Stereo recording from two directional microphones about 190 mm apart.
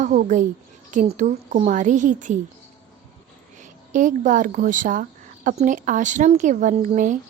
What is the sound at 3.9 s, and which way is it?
A woman's voice, 45° right (ahead or behind).